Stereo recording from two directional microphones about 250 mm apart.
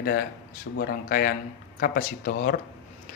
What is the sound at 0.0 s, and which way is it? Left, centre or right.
A man's voice, left.